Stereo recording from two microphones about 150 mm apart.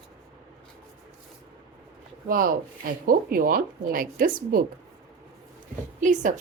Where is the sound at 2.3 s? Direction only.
70° right (ahead or behind).